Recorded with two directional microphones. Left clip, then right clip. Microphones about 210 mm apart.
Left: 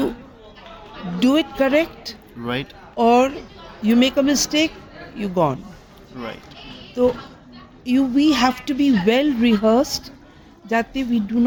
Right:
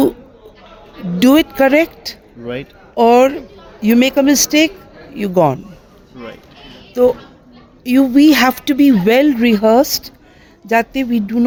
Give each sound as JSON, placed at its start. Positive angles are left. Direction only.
{"t": 1.2, "sound": "speech", "side_deg": -50}
{"t": 2.4, "sound": "speech", "side_deg": 10}
{"t": 2.9, "sound": "speech", "side_deg": -55}
{"t": 7.0, "sound": "speech", "side_deg": -55}